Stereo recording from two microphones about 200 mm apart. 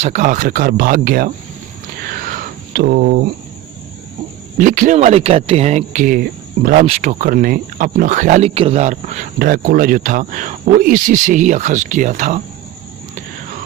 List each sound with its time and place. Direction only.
0.0 s speech: 35° right (ahead or behind)
2.0 s a sound: 45° right (ahead or behind)
4.5 s speech: 40° right (ahead or behind)
6.8 s speech: 35° right (ahead or behind)